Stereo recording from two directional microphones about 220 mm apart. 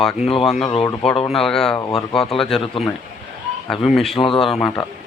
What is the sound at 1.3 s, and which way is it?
Speech, centre (ahead or behind).